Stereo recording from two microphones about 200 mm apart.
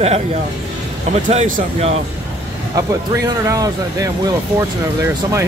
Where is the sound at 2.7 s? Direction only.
15° right (ahead or behind).